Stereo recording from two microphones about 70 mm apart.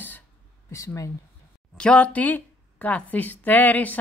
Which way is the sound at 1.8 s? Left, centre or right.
Centre.